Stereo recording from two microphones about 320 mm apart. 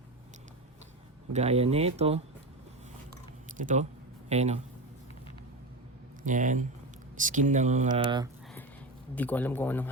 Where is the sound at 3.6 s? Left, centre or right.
Right.